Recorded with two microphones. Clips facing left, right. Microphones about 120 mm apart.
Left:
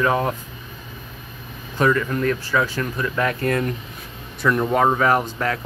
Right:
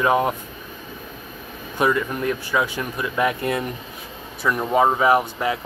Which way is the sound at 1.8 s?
15° right (ahead or behind).